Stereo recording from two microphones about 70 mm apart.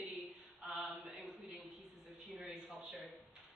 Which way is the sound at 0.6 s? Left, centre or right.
Centre.